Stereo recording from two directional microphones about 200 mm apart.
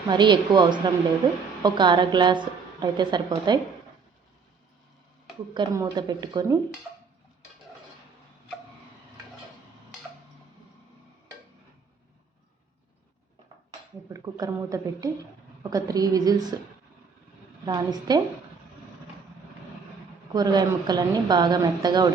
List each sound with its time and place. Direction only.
0.1 s a woman's voice: 20° right (ahead or behind)
5.5 s a woman's voice: 20° right (ahead or behind)
14.1 s a woman's voice: 15° right (ahead or behind)
17.7 s a woman's voice: 20° right (ahead or behind)
20.3 s a woman's voice: 20° right (ahead or behind)